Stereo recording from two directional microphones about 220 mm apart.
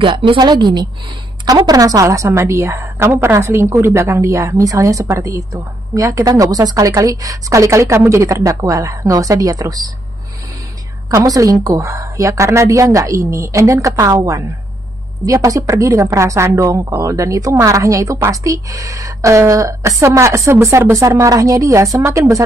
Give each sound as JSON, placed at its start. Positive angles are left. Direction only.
{"t": 0.0, "sound": "a woman's voice", "side_deg": -20}
{"t": 11.1, "sound": "a woman's voice", "side_deg": -15}